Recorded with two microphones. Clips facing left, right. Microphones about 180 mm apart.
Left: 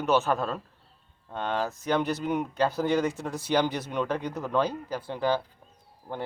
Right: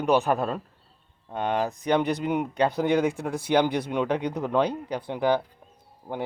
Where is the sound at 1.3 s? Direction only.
15° right (ahead or behind).